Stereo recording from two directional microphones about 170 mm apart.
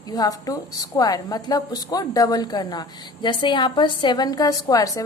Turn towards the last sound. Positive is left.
turn(degrees=20)  # may be behind; listen again after turning